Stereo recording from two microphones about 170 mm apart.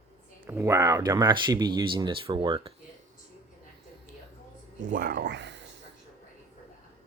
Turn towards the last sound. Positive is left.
turn(degrees=-90)